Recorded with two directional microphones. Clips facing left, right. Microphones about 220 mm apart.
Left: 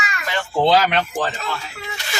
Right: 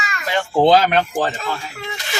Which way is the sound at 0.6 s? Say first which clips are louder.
Right 3 dB; 45° right (ahead or behind).